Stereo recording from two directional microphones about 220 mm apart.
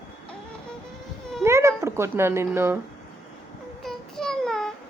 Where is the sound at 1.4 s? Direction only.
10° right (ahead or behind).